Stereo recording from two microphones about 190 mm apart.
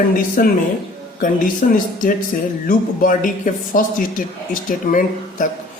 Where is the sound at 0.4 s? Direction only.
50° left (ahead or behind).